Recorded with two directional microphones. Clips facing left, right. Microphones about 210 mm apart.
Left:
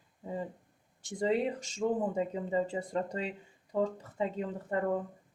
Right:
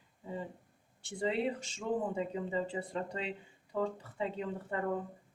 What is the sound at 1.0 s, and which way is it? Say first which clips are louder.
Speech: left 3 dB; 40° left (ahead or behind).